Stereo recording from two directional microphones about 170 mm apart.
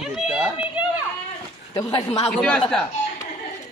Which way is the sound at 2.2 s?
5° left (ahead or behind).